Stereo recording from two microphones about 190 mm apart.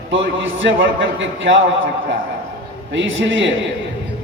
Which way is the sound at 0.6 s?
80° right.